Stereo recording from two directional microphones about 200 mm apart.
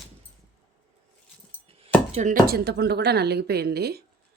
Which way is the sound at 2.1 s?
35° right (ahead or behind).